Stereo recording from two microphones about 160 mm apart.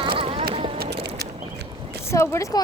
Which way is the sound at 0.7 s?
80° right.